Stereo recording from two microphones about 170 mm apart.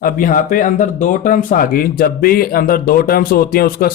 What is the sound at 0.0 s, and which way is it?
Speech, 55° left (ahead or behind).